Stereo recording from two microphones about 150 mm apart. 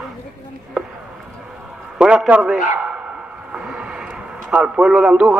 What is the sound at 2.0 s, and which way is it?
Speech, 5° right (ahead or behind).